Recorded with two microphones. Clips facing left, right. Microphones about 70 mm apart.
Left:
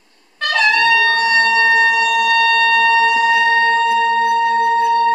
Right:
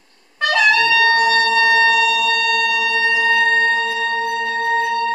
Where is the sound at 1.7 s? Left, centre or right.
Centre.